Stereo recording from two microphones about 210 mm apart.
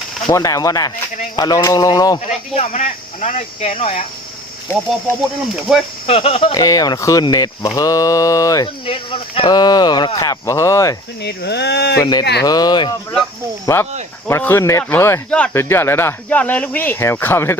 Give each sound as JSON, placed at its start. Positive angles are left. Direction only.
{"t": 0.3, "sound": "speech", "side_deg": 15}
{"t": 2.2, "sound": "speech", "side_deg": 30}
{"t": 4.7, "sound": "speech", "side_deg": 10}
{"t": 5.7, "sound": "speech", "side_deg": 0}
{"t": 6.1, "sound": "speech", "side_deg": 25}
{"t": 11.2, "sound": "speech", "side_deg": 50}
{"t": 12.5, "sound": "speech", "side_deg": 20}